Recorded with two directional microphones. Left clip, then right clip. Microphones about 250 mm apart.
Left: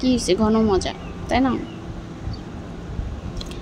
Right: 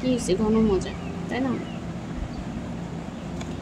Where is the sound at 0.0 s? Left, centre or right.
Left.